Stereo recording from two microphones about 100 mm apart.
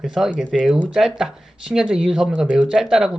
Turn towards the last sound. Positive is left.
turn(degrees=-5)  # may be behind; listen again after turning